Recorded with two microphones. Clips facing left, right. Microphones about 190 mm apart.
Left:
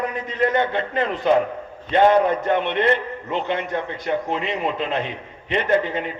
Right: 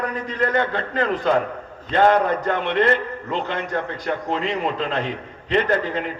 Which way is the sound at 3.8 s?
20° left (ahead or behind).